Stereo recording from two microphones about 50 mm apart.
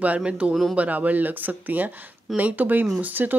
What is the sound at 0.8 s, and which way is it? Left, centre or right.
A woman's voice, right.